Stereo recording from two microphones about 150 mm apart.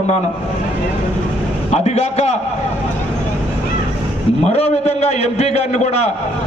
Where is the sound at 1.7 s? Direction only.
45° left (ahead or behind).